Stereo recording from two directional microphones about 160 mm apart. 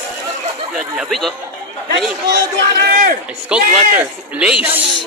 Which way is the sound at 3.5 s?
5° right (ahead or behind).